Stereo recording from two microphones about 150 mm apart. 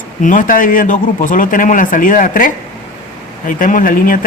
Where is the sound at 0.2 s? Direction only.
60° left (ahead or behind).